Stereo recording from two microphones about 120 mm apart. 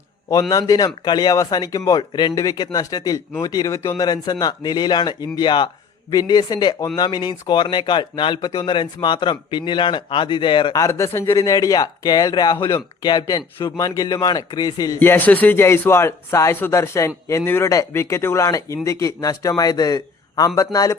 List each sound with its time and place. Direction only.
0.5 s speech: 30° left (ahead or behind)
10.8 s speech: 25° left (ahead or behind)
14.9 s speech: 15° left (ahead or behind); by 20.5 s 30° left (ahead or behind)